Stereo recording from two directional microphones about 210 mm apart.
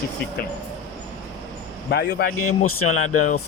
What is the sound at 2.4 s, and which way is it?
Speech, 90° left.